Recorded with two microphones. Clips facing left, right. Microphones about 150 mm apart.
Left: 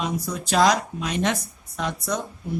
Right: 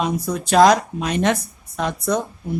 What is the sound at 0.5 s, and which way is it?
Speech, 50° right (ahead or behind).